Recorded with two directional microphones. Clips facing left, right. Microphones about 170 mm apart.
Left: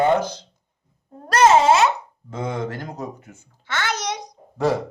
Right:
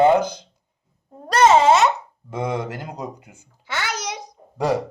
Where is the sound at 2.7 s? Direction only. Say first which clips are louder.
Even; 10° right (ahead or behind).